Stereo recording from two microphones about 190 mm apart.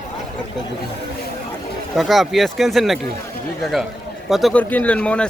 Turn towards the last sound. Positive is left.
turn(degrees=5)  # may be behind; listen again after turning